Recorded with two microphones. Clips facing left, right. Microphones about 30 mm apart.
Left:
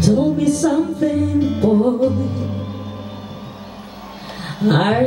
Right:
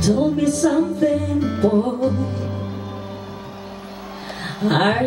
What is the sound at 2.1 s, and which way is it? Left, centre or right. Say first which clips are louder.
Music: left 2 dB; right.